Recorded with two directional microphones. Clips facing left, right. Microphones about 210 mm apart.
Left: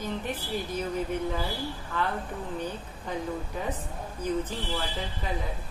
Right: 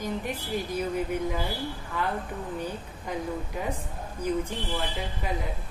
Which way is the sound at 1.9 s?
10° right (ahead or behind).